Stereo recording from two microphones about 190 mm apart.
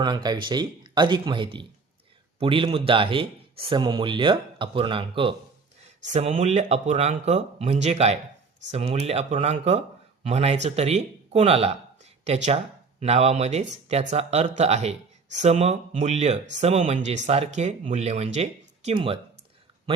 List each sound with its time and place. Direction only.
0.0 s speech: 20° right (ahead or behind)